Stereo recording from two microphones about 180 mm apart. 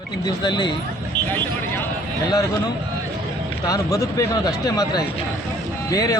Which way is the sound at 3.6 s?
20° left (ahead or behind).